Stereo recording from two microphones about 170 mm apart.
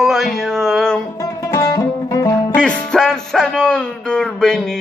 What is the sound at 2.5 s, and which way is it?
Speech, 5° left (ahead or behind).